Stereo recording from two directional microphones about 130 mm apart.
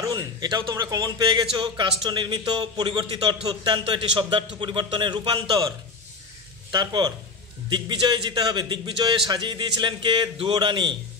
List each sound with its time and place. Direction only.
0.0 s a man's voice: 30° right (ahead or behind)
6.7 s a man's voice: 35° right (ahead or behind)